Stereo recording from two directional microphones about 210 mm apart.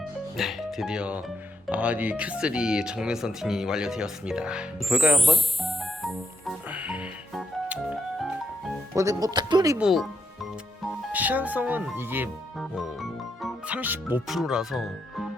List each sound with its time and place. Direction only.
0.3 s speech: centre (ahead or behind)
1.6 s music: 5° right (ahead or behind)
9.0 s speech: 15° right (ahead or behind)
9.7 s speech: centre (ahead or behind)
11.1 s speech: 5° right (ahead or behind)
12.5 s music: centre (ahead or behind)